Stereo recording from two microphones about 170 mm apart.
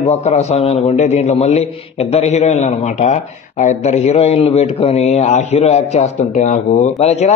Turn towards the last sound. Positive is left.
turn(degrees=40)  # may be behind; listen again after turning